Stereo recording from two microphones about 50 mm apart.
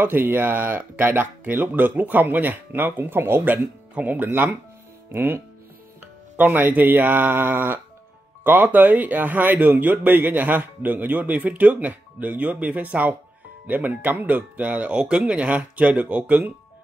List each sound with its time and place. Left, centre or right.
0.0 s speech: right
4.3 s speech: right